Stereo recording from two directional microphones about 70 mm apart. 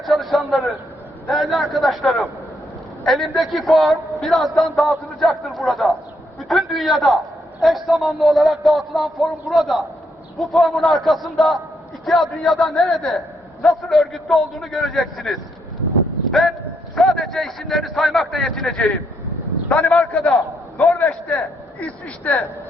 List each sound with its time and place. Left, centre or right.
0.0 s a sound: centre
1.3 s a man's voice: centre
21.8 s speech: left